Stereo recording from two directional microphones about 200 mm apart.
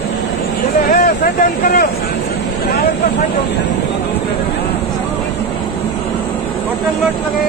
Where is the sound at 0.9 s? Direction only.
45° left (ahead or behind).